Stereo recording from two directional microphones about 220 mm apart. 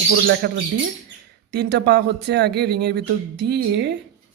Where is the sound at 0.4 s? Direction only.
50° right (ahead or behind).